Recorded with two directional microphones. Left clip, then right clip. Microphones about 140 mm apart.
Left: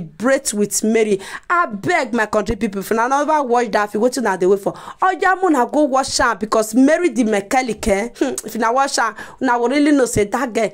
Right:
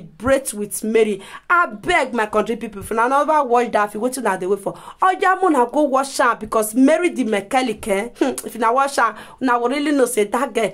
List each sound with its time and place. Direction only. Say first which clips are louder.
0.2 s speech: left 2 dB; 30° left (ahead or behind)
6.8 s speech: even; 15° left (ahead or behind)
7.5 s speech: left 1 dB; 30° left (ahead or behind)
8.2 s speech: even; 15° left (ahead or behind)